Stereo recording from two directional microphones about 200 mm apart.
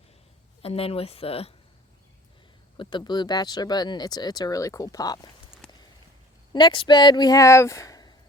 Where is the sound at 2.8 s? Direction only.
25° left (ahead or behind).